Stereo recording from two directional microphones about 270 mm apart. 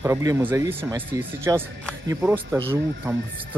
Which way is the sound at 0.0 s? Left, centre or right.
Centre.